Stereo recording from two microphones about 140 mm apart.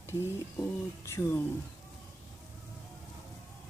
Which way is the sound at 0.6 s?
20° left (ahead or behind).